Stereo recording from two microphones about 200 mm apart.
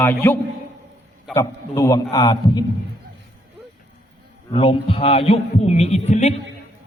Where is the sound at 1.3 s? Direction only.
15° left (ahead or behind).